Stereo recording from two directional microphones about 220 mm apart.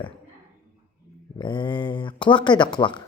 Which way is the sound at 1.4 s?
20° left (ahead or behind).